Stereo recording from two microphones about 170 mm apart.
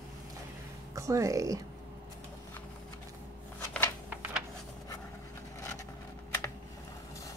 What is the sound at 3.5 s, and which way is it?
Shuffling cards, 10° left (ahead or behind).